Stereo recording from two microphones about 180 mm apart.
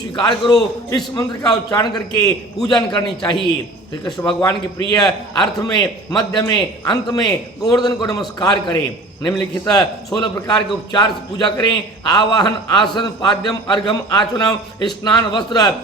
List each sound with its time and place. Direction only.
0.1 s a man's voice: 25° left (ahead or behind)
10.2 s a man's voice: 20° left (ahead or behind)